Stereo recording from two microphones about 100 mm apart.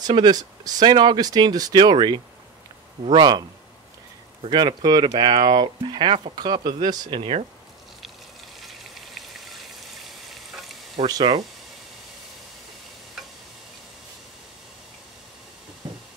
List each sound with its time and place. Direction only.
0.0 s speech: 45° right (ahead or behind)
7.2 s speech: 85° right
8.5 s rain: centre (ahead or behind)
11.0 s speech: 90° right